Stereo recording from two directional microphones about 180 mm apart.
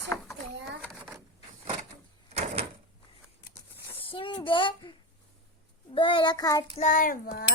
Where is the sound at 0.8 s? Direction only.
10° right (ahead or behind).